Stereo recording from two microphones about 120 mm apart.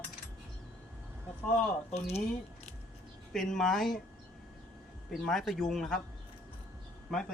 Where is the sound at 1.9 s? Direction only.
60° left (ahead or behind).